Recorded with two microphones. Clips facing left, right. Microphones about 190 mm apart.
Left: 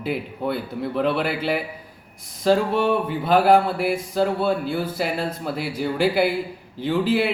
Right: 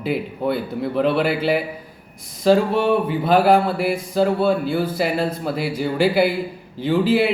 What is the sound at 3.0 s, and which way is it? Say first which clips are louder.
Speech: right 2 dB; 5° right (ahead or behind).